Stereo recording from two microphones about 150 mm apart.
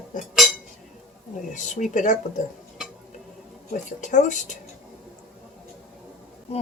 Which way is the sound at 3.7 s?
55° left (ahead or behind).